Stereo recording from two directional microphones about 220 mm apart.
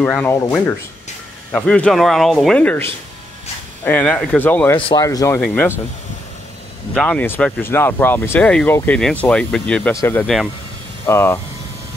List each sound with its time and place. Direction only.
0.0 s speech: 5° left (ahead or behind)
4.7 s speech: 20° left (ahead or behind)
6.9 s speech: 5° left (ahead or behind)